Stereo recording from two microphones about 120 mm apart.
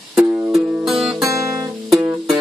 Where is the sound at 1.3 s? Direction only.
25° right (ahead or behind).